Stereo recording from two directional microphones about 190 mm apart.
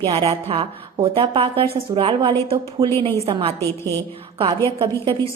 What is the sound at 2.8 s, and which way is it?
Speech, 15° right (ahead or behind).